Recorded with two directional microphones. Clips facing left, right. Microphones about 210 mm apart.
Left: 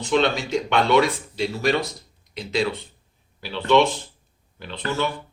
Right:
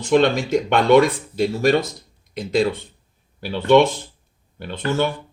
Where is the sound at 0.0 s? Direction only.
50° right (ahead or behind).